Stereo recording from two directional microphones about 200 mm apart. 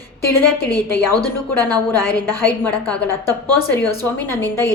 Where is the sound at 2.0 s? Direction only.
10° left (ahead or behind).